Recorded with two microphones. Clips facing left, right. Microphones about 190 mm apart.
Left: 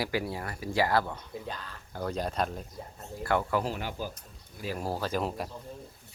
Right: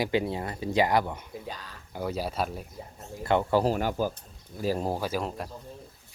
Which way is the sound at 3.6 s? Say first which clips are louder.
Right 8 dB; 45° right (ahead or behind).